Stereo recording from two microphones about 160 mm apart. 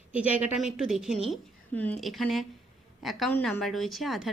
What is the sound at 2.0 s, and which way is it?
A woman's voice, centre (ahead or behind).